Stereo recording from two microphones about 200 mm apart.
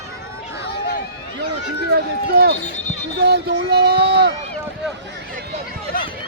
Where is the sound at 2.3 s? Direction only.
50° right (ahead or behind).